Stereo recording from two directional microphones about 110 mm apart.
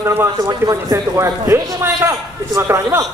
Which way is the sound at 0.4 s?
35° right (ahead or behind).